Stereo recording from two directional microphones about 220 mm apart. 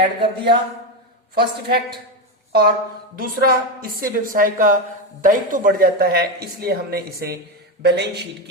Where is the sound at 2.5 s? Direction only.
45° right (ahead or behind).